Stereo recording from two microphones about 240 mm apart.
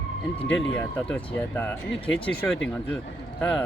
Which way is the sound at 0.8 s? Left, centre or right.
Centre.